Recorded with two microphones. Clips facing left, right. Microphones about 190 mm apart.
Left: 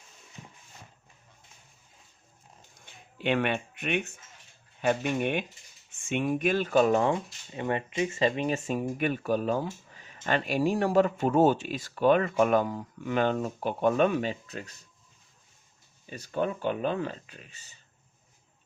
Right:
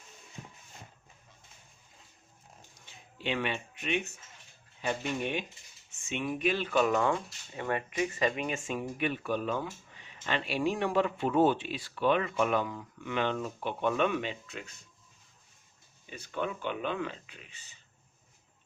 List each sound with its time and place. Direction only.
2.8 s a sound: 55° left (ahead or behind)
4.8 s speech: 55° left (ahead or behind); by 14.6 s 40° left (ahead or behind)
16.0 s speech: 40° left (ahead or behind)